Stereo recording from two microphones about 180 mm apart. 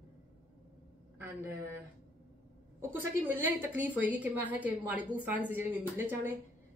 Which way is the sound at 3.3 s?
10° right (ahead or behind).